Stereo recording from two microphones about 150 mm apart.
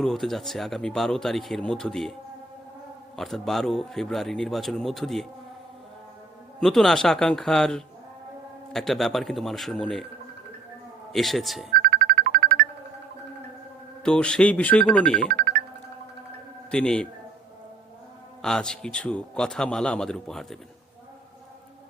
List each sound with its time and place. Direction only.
0.0 s speech: centre (ahead or behind)
3.2 s speech: centre (ahead or behind)
6.6 s speech: centre (ahead or behind)
11.1 s speech: centre (ahead or behind)
11.7 s music: 70° right (ahead or behind)
14.0 s speech: 5° left (ahead or behind)
15.3 s music: 75° right (ahead or behind)
16.7 s speech: 5° left (ahead or behind)
18.4 s speech: 5° left (ahead or behind)